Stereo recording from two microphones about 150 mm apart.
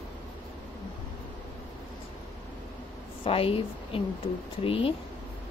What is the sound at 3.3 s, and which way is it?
Speech, 40° left (ahead or behind).